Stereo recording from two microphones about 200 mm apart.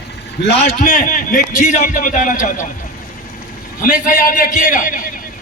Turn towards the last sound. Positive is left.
turn(degrees=40)  # may be behind; listen again after turning